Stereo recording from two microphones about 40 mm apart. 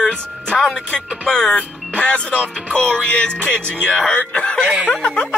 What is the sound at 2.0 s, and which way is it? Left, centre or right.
Speech, left.